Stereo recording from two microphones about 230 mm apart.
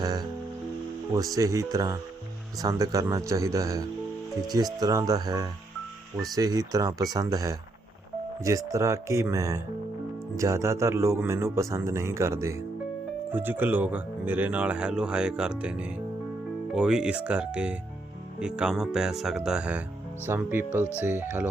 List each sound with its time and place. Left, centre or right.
0.0 s music: centre
1.1 s speech: centre